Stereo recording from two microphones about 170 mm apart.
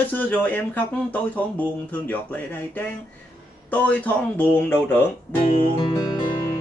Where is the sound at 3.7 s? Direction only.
10° left (ahead or behind).